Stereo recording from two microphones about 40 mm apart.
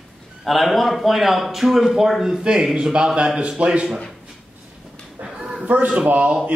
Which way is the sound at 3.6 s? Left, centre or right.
Right.